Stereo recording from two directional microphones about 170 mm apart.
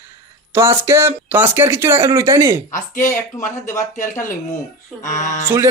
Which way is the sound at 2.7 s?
50° left (ahead or behind).